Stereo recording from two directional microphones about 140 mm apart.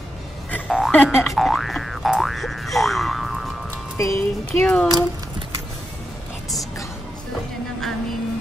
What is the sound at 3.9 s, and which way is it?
Speech, 20° left (ahead or behind).